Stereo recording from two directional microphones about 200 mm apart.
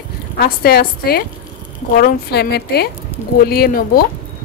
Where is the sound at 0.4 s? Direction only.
50° left (ahead or behind).